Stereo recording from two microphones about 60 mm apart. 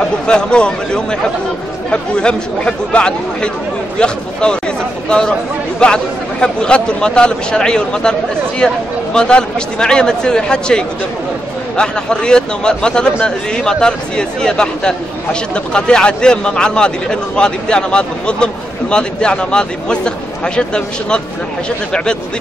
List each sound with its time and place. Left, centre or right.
0.0 s speech: centre
5.8 s speech: centre